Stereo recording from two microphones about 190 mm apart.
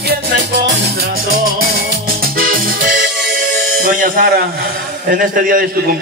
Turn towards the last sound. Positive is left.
turn(degrees=-50)  # may be behind; listen again after turning